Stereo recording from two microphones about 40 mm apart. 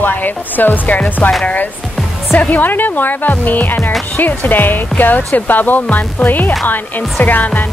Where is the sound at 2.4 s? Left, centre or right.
Left.